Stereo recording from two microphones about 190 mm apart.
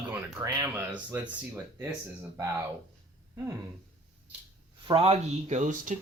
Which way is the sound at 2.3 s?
15° right (ahead or behind).